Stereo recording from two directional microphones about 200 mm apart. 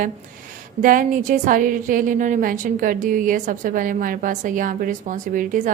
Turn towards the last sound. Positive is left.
turn(degrees=-40)  # may be behind; listen again after turning